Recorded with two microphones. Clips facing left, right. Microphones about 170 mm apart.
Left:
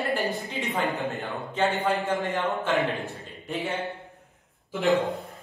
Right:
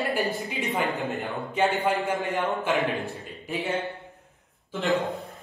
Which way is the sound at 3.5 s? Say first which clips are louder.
Right 1 dB; centre (ahead or behind).